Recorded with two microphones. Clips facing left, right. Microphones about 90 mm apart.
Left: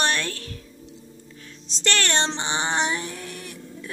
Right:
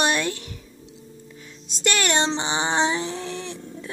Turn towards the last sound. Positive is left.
turn(degrees=-25)  # may be behind; listen again after turning